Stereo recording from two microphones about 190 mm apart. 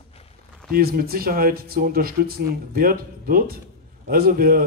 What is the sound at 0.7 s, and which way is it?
A man's voice, 50° right (ahead or behind).